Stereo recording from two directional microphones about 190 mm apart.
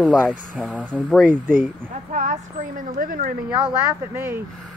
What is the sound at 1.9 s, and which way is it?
Speech, 40° right (ahead or behind).